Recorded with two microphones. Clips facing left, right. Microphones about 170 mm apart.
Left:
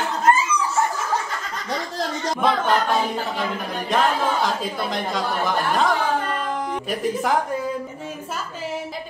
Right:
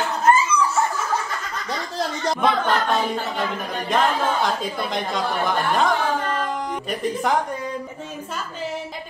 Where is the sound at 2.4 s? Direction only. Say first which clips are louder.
Left 1 dB; centre (ahead or behind).